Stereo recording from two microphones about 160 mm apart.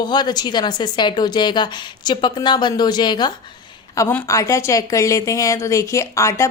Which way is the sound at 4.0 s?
15° left (ahead or behind).